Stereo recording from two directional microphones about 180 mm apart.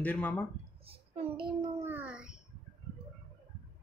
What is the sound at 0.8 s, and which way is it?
Speech, 30° right (ahead or behind).